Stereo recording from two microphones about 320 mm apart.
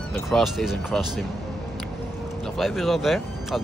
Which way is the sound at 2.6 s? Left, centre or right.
Centre.